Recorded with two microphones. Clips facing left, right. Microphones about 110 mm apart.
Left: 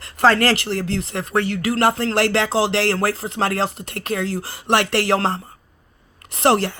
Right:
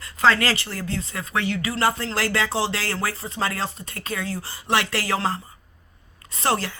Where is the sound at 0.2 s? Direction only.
55° left (ahead or behind).